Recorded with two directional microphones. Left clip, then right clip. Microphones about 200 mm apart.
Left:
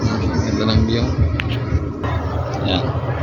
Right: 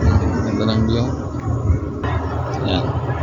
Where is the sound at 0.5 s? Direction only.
5° right (ahead or behind).